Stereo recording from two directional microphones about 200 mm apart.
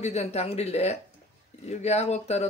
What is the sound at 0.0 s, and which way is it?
Speech, 30° left (ahead or behind).